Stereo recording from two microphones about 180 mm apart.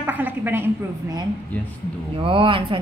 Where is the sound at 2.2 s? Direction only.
30° right (ahead or behind).